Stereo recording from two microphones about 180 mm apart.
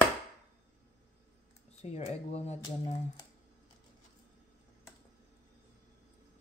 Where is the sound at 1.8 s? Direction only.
35° left (ahead or behind).